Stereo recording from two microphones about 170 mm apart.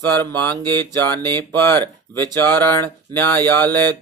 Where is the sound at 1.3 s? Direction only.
15° left (ahead or behind).